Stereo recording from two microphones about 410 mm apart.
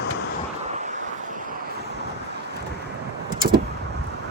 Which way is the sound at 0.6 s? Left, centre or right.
Centre.